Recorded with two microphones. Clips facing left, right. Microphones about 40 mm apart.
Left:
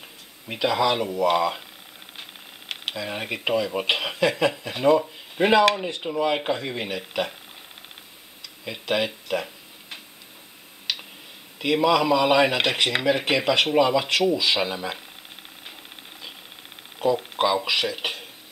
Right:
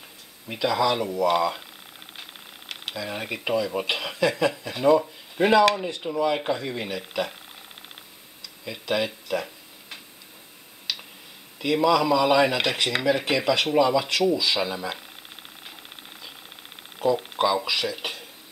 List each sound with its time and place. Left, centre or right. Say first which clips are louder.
0.5 s speech: left 1 dB; left
2.7 s speech: left 2 dB; left
8.6 s speech: left 1 dB; left
11.5 s speech: left 1 dB; left
17.6 s speech: left 2 dB; left